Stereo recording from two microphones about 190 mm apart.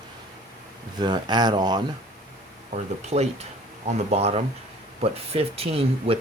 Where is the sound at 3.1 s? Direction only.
35° right (ahead or behind).